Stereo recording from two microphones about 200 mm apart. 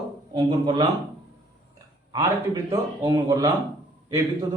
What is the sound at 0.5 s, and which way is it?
Speech, 25° right (ahead or behind).